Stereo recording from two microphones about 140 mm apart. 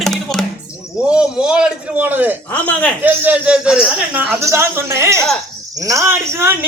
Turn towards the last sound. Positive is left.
turn(degrees=-15)  # may be behind; listen again after turning